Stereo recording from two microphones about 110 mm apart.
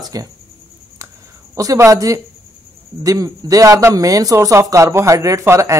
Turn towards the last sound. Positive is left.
turn(degrees=-25)  # may be behind; listen again after turning